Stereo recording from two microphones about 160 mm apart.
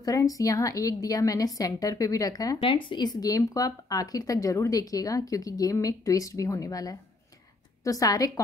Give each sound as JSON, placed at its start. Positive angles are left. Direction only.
{"t": 0.0, "sound": "speech", "side_deg": 20}